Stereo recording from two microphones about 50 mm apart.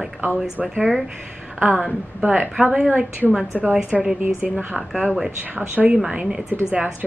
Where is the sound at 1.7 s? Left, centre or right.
Left.